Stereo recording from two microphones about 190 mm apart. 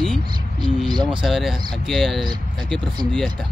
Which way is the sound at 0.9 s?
25° right (ahead or behind).